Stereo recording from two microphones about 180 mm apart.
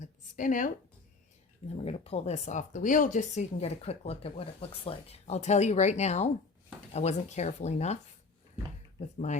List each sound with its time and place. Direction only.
0.0 s a sound: 45° left (ahead or behind)
1.6 s speech: 35° left (ahead or behind)
9.1 s speech: 40° left (ahead or behind)